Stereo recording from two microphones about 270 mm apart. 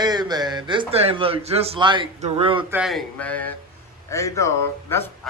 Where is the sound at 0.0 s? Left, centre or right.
Centre.